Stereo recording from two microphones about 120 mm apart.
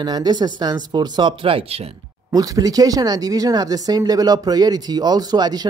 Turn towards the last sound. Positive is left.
turn(degrees=-35)  # may be behind; listen again after turning